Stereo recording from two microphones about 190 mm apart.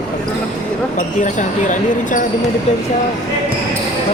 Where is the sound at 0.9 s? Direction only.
40° left (ahead or behind).